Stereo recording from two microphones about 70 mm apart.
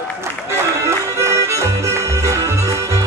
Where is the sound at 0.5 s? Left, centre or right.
Right.